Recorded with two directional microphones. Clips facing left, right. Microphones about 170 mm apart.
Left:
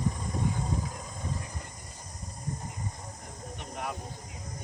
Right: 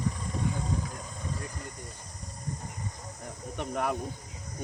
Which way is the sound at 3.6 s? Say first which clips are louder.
Right 7 dB; 55° right (ahead or behind).